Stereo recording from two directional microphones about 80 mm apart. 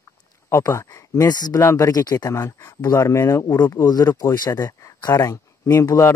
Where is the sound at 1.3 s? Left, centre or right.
Left.